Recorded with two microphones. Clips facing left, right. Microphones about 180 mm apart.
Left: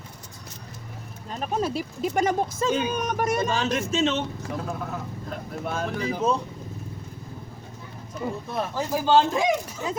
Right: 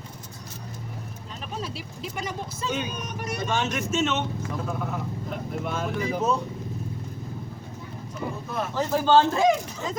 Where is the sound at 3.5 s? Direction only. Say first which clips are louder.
Left 1 dB; 35° left (ahead or behind).